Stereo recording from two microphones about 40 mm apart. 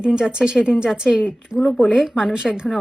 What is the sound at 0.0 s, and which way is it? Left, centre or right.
A woman's voice, right.